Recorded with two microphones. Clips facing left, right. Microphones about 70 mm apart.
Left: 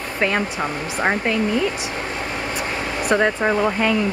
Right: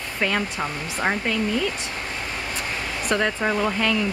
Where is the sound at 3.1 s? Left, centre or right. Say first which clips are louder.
Left 4 dB; centre.